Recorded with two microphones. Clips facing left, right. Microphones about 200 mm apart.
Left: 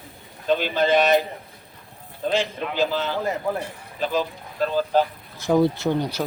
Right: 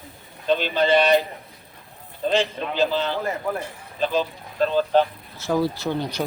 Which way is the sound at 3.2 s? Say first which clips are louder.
Left 1 dB; 15° left (ahead or behind).